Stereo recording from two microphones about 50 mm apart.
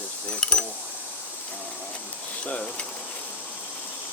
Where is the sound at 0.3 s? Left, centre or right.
Centre.